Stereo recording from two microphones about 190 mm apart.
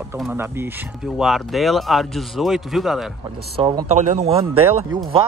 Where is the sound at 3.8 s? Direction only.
40° right (ahead or behind).